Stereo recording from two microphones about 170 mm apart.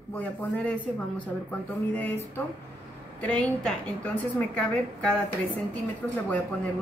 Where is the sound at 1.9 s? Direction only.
10° left (ahead or behind).